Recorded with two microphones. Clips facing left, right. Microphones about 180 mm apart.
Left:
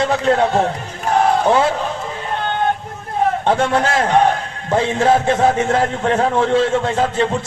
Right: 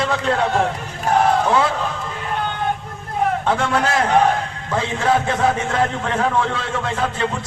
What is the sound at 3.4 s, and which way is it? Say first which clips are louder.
A man's voice: left 3 dB; 25° left (ahead or behind).